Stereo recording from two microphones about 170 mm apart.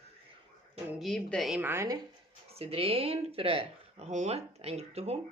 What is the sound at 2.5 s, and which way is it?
Speech, 35° right (ahead or behind).